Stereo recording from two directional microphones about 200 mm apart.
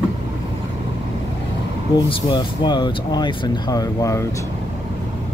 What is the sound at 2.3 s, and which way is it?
Speech, 25° left (ahead or behind).